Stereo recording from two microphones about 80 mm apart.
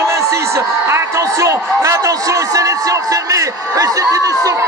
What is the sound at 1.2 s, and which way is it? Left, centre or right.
A man's voice, right.